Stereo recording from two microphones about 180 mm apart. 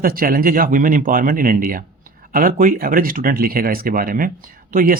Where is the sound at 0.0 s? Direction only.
50° right (ahead or behind).